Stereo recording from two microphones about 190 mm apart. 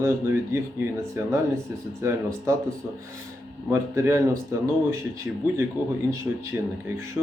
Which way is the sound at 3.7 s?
15° right (ahead or behind).